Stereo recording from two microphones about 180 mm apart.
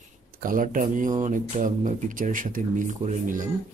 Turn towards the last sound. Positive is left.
turn(degrees=-45)  # may be behind; listen again after turning